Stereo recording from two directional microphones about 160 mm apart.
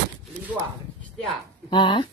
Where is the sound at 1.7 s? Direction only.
30° left (ahead or behind).